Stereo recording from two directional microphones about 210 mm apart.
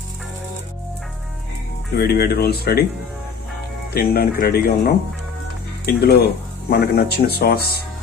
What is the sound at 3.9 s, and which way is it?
Speech, 45° left (ahead or behind).